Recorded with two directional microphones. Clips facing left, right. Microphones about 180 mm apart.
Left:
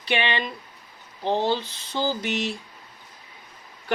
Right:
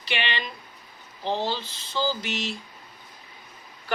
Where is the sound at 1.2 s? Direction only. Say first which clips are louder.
Left 4 dB; 55° left (ahead or behind).